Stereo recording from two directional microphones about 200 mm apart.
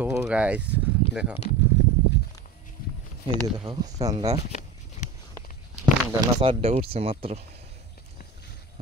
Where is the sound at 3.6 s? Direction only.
20° right (ahead or behind).